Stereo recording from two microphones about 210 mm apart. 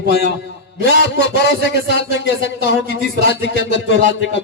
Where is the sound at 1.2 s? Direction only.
55° left (ahead or behind).